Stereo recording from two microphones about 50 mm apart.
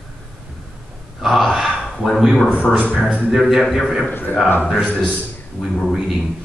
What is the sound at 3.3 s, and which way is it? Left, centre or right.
Speech, centre.